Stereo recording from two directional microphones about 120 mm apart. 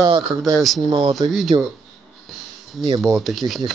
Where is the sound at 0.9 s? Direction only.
45° right (ahead or behind).